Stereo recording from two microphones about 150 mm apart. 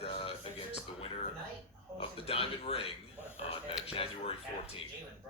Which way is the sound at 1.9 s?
40° left (ahead or behind).